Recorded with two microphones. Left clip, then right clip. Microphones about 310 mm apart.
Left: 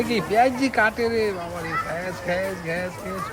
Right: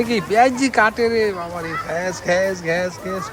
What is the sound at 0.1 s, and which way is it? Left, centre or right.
Speech, centre.